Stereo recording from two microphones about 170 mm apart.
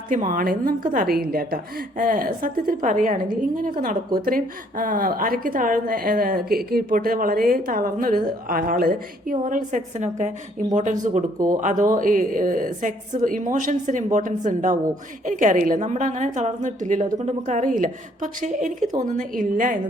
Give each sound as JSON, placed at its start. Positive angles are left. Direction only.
{"t": 0.1, "sound": "a woman's voice", "side_deg": -50}